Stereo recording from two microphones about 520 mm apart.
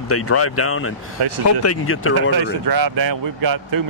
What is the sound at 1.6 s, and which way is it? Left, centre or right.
Speech, left.